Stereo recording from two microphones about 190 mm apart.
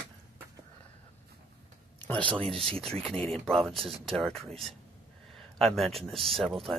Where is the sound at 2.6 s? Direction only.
30° right (ahead or behind).